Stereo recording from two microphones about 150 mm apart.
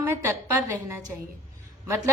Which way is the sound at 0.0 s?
20° right (ahead or behind).